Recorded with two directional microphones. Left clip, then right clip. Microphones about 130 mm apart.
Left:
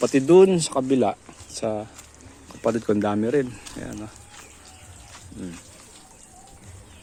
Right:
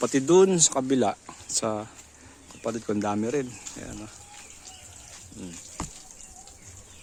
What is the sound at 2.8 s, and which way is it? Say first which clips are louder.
Speech: left 5 dB; 5° right (ahead or behind).